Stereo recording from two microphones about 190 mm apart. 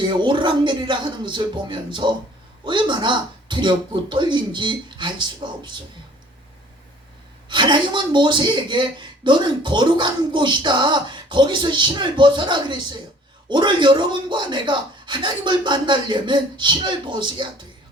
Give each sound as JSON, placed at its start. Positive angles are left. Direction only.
{"t": 0.0, "sound": "a woman's voice", "side_deg": -25}
{"t": 7.4, "sound": "a woman's voice", "side_deg": -25}